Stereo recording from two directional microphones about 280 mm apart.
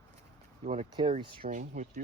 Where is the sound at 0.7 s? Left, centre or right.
Centre.